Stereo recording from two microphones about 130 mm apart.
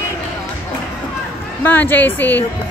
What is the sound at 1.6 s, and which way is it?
Speech, 15° left (ahead or behind).